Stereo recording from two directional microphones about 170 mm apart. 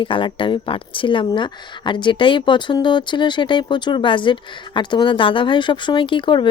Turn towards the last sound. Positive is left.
turn(degrees=30)  # may be behind; listen again after turning